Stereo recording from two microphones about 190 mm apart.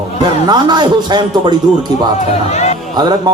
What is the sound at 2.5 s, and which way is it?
Speech, 35° left (ahead or behind).